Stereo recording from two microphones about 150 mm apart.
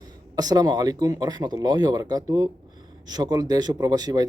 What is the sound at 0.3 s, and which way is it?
Speech, 25° right (ahead or behind).